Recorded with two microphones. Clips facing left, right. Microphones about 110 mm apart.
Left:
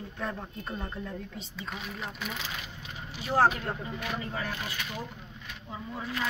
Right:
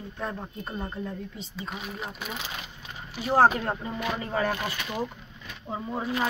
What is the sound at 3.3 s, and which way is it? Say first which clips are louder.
Speech: right 4 dB; 45° right (ahead or behind).